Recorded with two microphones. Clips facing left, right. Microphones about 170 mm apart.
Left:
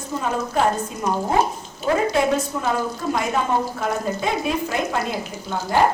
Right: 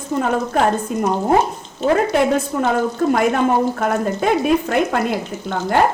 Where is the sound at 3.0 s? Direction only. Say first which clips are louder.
Right 10 dB; 55° right (ahead or behind).